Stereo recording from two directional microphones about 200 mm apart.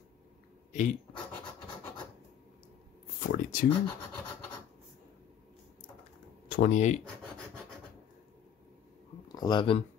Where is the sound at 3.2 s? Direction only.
45° left (ahead or behind).